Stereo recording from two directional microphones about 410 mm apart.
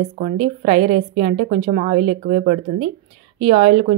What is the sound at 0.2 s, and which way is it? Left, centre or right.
A woman's voice, centre.